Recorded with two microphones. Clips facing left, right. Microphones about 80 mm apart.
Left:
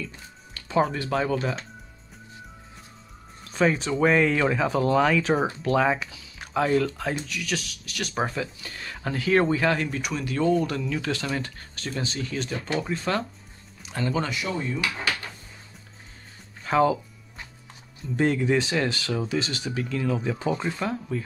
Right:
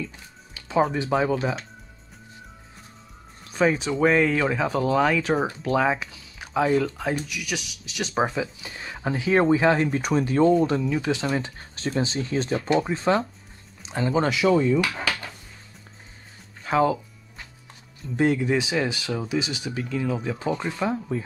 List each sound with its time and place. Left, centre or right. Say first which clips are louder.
0.6 s music: right 1 dB; centre
1.1 s speech: right 2 dB; centre
3.4 s speech: right 1 dB; centre; by 9.8 s right
9.8 s speech: right 6 dB; right
16.6 s speech: even; centre
18.1 s speech: right 1 dB; centre